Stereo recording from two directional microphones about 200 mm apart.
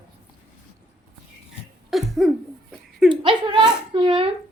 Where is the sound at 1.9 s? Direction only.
Centre (ahead or behind).